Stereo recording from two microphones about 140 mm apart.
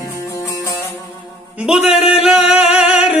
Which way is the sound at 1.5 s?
5° right (ahead or behind).